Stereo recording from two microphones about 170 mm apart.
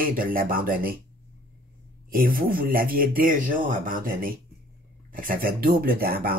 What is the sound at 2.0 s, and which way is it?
Speech, 60° right (ahead or behind).